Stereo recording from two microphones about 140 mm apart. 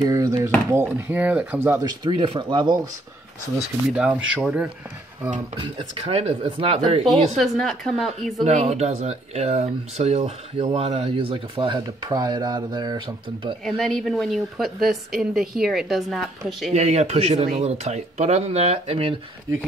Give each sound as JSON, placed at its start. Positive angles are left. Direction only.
{"t": 0.0, "sound": "a sound", "side_deg": -25}
{"t": 0.7, "sound": "speech", "side_deg": -15}
{"t": 1.9, "sound": "speech", "side_deg": -35}
{"t": 3.9, "sound": "speech", "side_deg": -10}
{"t": 5.6, "sound": "speech", "side_deg": -45}
{"t": 7.1, "sound": "a woman's voice", "side_deg": 0}
{"t": 8.5, "sound": "speech", "side_deg": -50}
{"t": 13.7, "sound": "a woman's voice", "side_deg": 5}
{"t": 16.7, "sound": "speech", "side_deg": -50}